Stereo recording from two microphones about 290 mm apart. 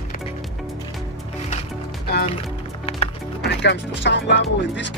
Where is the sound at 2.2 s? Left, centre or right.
Centre.